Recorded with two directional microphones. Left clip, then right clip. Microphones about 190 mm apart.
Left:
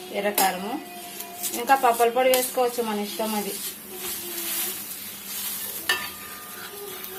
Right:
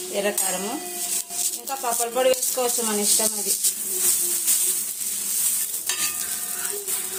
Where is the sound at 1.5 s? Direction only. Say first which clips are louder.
Left 10 dB; 5° right (ahead or behind).